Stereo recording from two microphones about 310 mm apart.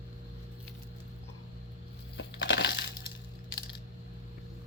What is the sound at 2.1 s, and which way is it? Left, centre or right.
Crushing, left.